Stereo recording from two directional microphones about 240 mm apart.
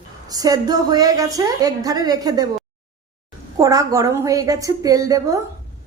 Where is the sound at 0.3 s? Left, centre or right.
Centre.